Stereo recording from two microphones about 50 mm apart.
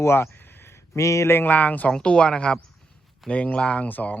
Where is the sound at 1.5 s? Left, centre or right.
Left.